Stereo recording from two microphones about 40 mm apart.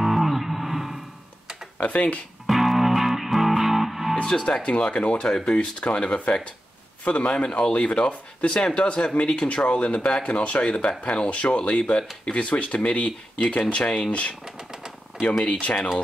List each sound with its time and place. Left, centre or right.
0.0 s guitar: centre
1.8 s speech: left
2.4 s music: centre
4.2 s speech: left
5.3 s speech: centre
5.6 s speech: left
14.4 s typewriter: centre
15.2 s speech: left